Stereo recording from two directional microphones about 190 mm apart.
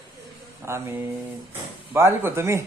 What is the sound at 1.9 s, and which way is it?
Speech, 15° right (ahead or behind).